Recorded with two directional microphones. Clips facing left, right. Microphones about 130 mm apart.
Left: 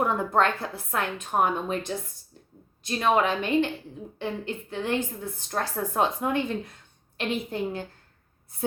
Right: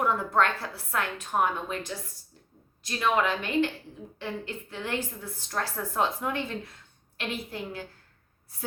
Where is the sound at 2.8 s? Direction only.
25° left (ahead or behind).